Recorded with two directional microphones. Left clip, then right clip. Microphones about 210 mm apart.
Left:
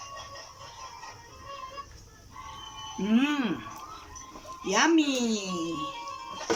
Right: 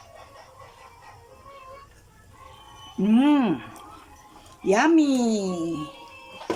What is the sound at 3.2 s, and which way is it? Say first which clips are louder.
Speech: right 7 dB; 30° right (ahead or behind).